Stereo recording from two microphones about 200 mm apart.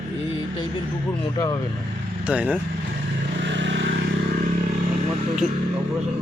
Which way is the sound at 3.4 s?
65° right (ahead or behind).